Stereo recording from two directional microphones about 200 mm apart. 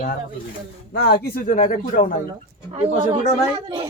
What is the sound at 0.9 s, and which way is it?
Speech, 50° left (ahead or behind).